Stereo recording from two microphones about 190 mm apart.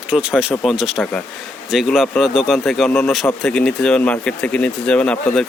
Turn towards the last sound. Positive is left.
turn(degrees=5)  # may be behind; listen again after turning